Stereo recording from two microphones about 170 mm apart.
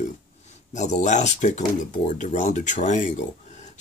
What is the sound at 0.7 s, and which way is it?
Speech, 45° left (ahead or behind).